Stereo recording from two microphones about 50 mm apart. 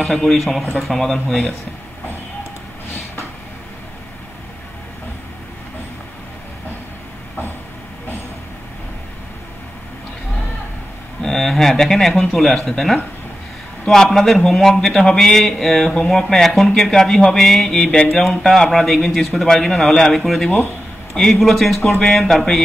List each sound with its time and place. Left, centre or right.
0.0 s speech: centre
11.2 s speech: centre